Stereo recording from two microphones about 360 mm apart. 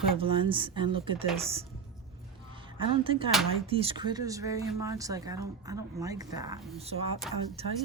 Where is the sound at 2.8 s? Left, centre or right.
Centre.